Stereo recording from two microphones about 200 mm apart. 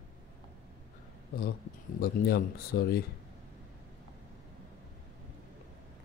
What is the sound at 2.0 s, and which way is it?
Speech, 50° left (ahead or behind).